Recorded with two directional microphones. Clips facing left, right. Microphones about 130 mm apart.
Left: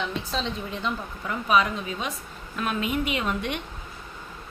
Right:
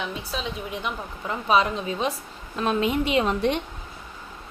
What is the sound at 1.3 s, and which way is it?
A woman's voice, 30° right (ahead or behind).